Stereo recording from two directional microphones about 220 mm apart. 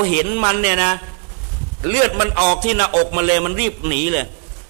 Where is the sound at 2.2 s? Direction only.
15° right (ahead or behind).